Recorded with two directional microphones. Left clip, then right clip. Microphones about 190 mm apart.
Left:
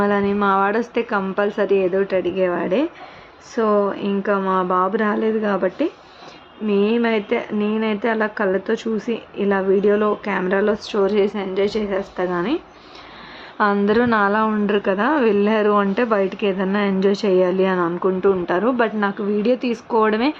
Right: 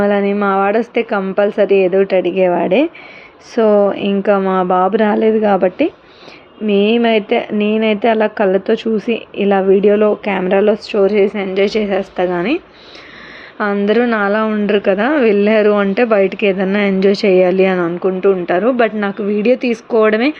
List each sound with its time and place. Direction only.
0.0 s a woman's voice: 10° right (ahead or behind)
13.6 s a woman's voice: 5° right (ahead or behind)